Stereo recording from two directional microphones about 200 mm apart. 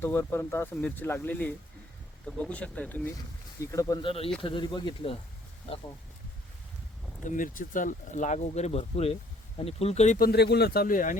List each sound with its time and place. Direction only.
0.0 s speech: 10° left (ahead or behind)
7.3 s speech: 40° left (ahead or behind)
10.2 s speech: 50° left (ahead or behind)